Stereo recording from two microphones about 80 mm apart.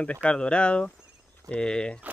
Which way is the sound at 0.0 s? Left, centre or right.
Centre.